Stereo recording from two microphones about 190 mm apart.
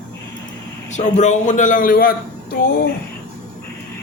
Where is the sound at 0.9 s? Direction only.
40° left (ahead or behind).